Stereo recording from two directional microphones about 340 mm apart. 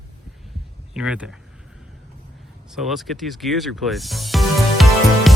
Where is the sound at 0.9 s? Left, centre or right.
Centre.